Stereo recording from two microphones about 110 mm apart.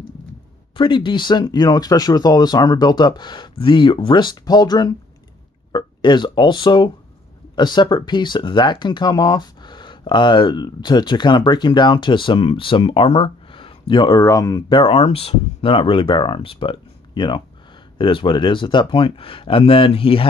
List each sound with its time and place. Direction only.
0.7 s speech: 45° left (ahead or behind)
14.2 s speech: 35° left (ahead or behind)
14.7 s speech: 55° left (ahead or behind)